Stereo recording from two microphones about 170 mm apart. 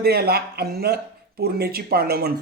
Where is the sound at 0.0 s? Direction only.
65° right (ahead or behind).